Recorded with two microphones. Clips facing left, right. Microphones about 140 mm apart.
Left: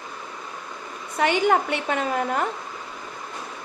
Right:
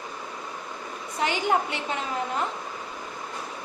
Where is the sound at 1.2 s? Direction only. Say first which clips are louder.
Left 5 dB; 60° left (ahead or behind).